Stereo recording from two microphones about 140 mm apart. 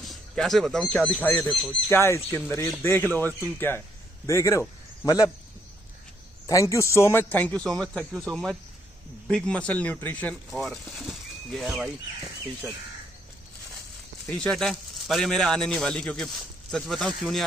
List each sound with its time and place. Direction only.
0.0 s a man's voice: centre (ahead or behind); by 5.3 s 25° left (ahead or behind)
6.4 s a man's voice: 20° left (ahead or behind)
10.5 s speech: centre (ahead or behind)
14.3 s speech: 5° left (ahead or behind)